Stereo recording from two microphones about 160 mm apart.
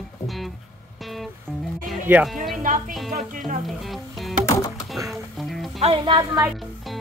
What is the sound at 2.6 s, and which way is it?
Speech, 55° right (ahead or behind).